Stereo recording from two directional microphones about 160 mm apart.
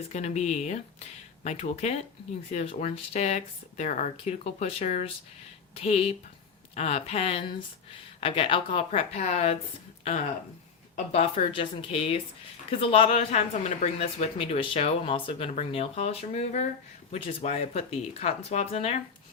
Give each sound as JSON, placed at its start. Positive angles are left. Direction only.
{"t": 0.1, "sound": "speech", "side_deg": 45}